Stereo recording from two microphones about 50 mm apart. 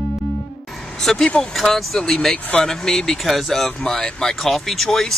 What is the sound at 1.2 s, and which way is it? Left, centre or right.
Speech, left.